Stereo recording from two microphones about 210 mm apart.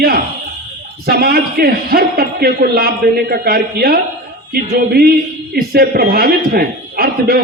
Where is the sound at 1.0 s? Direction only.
45° right (ahead or behind).